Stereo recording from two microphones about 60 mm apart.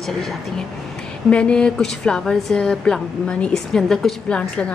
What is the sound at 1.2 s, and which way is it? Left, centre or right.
A woman's voice, centre.